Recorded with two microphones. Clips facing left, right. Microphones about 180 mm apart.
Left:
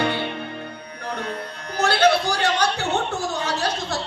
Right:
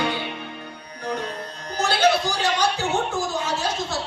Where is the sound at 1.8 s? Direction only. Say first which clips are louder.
Left 2 dB; 60° left (ahead or behind).